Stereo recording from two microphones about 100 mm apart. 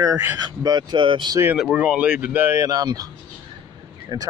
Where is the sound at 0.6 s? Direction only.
45° right (ahead or behind).